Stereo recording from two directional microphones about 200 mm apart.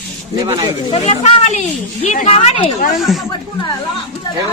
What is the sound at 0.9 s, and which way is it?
A woman's voice, 35° left (ahead or behind).